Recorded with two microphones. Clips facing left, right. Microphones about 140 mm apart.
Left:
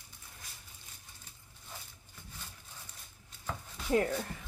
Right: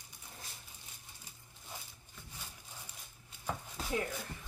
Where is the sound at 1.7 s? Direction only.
15° right (ahead or behind).